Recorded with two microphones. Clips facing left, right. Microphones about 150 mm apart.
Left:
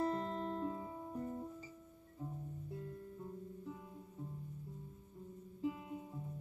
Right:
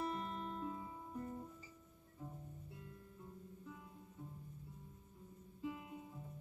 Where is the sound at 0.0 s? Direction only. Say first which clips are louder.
Left 5 dB; 30° left (ahead or behind).